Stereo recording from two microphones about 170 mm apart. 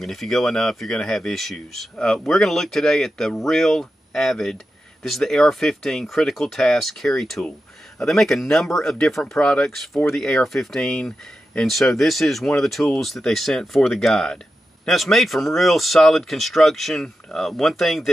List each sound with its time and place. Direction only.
0.0 s speech: centre (ahead or behind)